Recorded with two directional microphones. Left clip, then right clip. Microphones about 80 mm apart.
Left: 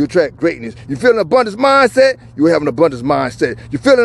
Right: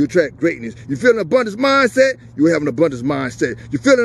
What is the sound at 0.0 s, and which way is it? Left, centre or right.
Speech, right.